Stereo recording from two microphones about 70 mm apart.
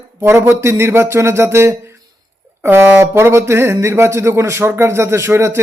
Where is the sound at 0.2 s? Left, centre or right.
Right.